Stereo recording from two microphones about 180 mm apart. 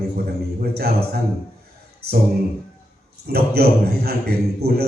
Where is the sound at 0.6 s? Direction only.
60° right (ahead or behind).